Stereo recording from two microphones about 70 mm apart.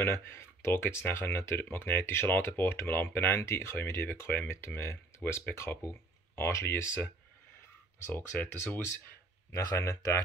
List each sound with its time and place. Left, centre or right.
0.0 s speech: left
8.1 s speech: left
9.5 s speech: left